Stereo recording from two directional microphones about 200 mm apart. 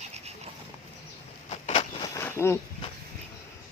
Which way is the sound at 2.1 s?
10° left (ahead or behind).